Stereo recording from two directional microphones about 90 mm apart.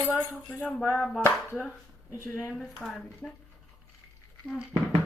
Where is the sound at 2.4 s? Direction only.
10° right (ahead or behind).